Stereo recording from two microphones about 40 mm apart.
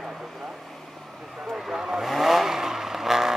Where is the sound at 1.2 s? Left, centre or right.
Centre.